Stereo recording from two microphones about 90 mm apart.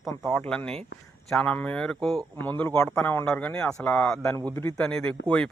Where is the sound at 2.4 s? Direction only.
20° left (ahead or behind).